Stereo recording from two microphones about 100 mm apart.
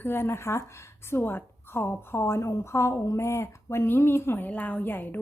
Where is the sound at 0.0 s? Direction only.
25° left (ahead or behind).